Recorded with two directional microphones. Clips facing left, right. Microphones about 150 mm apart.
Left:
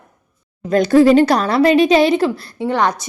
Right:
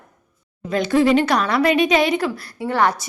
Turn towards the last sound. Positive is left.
turn(degrees=20)  # may be behind; listen again after turning